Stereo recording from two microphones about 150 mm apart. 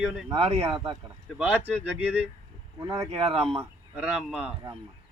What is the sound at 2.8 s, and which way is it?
Speech, 20° right (ahead or behind).